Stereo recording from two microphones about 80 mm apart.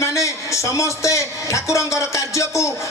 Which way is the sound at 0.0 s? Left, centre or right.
Left.